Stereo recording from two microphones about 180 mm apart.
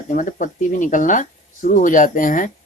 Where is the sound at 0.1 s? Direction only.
45° left (ahead or behind).